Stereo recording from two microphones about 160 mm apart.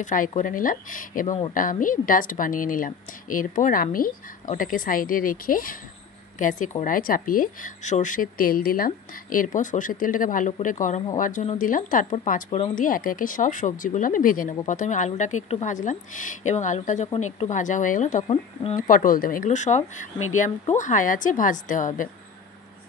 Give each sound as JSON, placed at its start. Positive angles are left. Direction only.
{"t": 0.0, "sound": "a woman's voice", "side_deg": 55}
{"t": 18.3, "sound": "speech", "side_deg": 35}
{"t": 18.8, "sound": "a woman's voice", "side_deg": 60}